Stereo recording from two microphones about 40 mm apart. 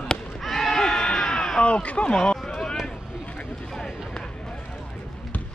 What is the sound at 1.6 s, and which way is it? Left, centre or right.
Speech, left.